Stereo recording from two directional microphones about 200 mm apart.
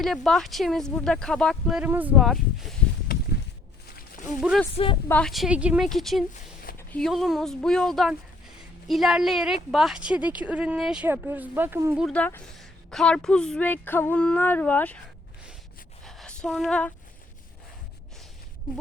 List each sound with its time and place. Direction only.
0.0 s speech: centre (ahead or behind)
4.4 s speech: centre (ahead or behind)
12.0 s a woman's voice: 5° left (ahead or behind)
16.0 s a sound: centre (ahead or behind)